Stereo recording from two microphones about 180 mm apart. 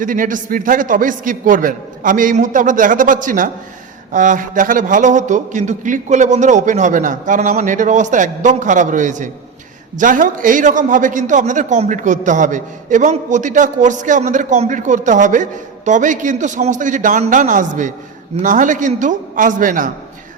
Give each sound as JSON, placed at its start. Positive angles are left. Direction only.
{"t": 0.0, "sound": "a man's voice", "side_deg": -50}